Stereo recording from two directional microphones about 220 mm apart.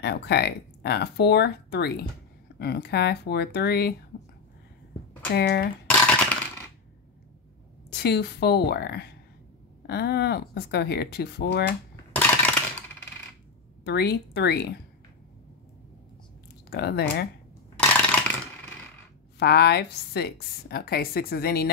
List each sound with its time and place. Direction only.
0.0 s a woman's voice: 50° left (ahead or behind)
5.3 s a woman's voice: 50° left (ahead or behind)
5.9 s coin: 10° left (ahead or behind)
7.9 s a woman's voice: 50° left (ahead or behind)
12.1 s a sound: 5° left (ahead or behind)
13.8 s a woman's voice: 50° left (ahead or behind)
16.7 s a woman's voice: 50° left (ahead or behind)
19.3 s a woman's voice: 50° left (ahead or behind)